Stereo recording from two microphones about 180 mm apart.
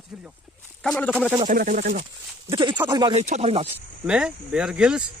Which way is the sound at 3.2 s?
40° right (ahead or behind).